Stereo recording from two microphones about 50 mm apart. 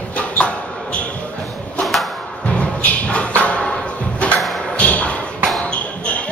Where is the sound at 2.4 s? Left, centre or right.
Left.